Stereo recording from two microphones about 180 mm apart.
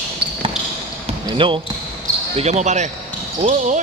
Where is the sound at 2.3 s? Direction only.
40° right (ahead or behind).